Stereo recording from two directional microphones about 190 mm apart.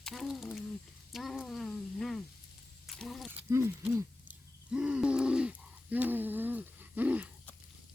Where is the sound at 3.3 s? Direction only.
10° right (ahead or behind).